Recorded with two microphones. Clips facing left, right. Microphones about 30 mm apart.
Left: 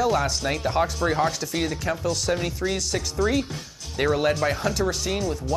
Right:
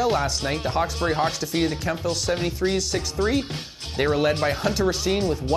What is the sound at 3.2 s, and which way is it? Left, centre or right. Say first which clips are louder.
Speech: even; right.